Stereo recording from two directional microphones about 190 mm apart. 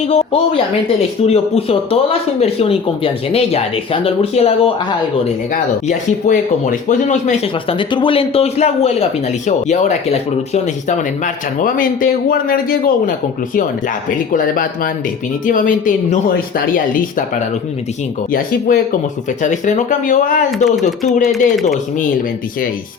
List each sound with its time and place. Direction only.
0.1 s a man's voice: 30° left (ahead or behind); by 13.1 s 50° left (ahead or behind)
14.3 s a man's voice: 45° left (ahead or behind)
18.3 s a man's voice: 50° left (ahead or behind)
21.0 s speech: centre (ahead or behind)